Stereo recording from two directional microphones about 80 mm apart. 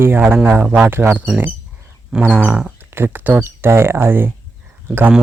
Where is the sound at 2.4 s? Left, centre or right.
Right.